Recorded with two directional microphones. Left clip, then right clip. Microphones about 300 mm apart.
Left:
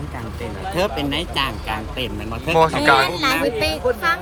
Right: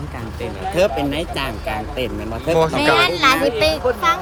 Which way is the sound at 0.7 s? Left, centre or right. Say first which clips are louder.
Right 4 dB; centre.